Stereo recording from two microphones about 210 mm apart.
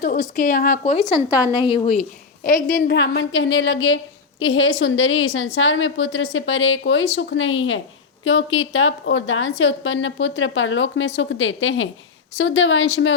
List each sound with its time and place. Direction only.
0.0 s a woman's voice: 40° left (ahead or behind)
1.1 s a woman's voice: 15° left (ahead or behind); by 2.9 s 40° left (ahead or behind)
2.9 s a woman's voice: 55° left (ahead or behind)